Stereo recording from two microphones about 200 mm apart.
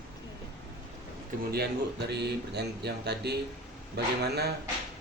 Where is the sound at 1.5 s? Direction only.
55° right (ahead or behind).